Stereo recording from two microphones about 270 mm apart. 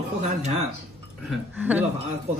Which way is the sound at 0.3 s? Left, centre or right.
Right.